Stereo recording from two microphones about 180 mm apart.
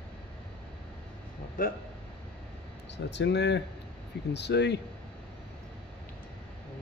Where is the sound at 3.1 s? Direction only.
75° left (ahead or behind).